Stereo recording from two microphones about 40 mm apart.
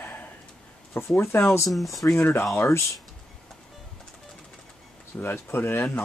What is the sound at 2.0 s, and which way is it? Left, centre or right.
Speech, left.